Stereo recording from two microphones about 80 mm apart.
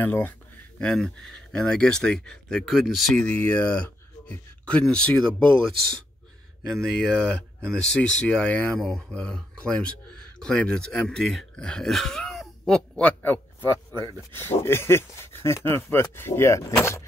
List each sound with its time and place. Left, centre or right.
0.0 s speech: left
0.7 s speech: centre
3.3 s speech: centre
6.6 s speech: centre; by 16.6 s left